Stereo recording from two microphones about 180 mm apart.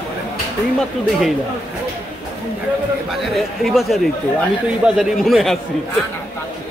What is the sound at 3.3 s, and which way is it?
Speech, centre (ahead or behind).